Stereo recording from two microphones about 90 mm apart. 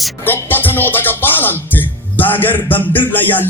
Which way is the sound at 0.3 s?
25° left (ahead or behind).